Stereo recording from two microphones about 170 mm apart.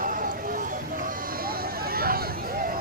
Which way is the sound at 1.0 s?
60° right (ahead or behind).